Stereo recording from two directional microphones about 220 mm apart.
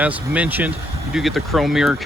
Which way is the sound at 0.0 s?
5° right (ahead or behind).